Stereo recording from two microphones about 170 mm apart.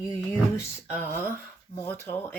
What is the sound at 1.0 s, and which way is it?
Speech, 10° left (ahead or behind).